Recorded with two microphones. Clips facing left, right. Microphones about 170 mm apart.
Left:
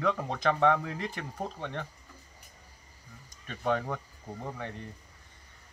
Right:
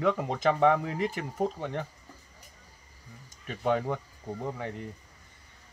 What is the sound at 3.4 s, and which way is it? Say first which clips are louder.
Speech: right 2 dB; 10° right (ahead or behind).